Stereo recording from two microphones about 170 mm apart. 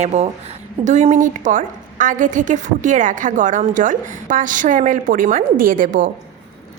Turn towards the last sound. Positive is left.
turn(degrees=-50)  # may be behind; listen again after turning